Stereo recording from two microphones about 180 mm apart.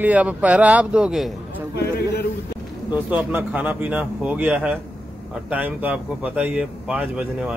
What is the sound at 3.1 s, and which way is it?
Speech, 10° right (ahead or behind).